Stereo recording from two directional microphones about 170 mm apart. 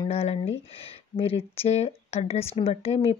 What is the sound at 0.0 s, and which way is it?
Speech, 35° left (ahead or behind).